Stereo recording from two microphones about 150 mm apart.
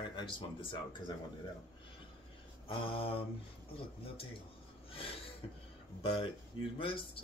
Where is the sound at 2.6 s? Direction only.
40° left (ahead or behind).